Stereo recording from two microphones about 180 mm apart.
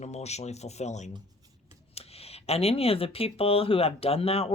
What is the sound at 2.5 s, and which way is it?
Speech, 35° left (ahead or behind).